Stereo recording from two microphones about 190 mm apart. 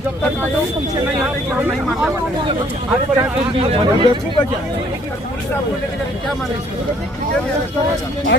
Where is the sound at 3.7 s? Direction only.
30° right (ahead or behind).